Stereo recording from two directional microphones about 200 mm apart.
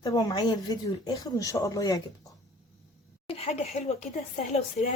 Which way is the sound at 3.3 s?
30° left (ahead or behind).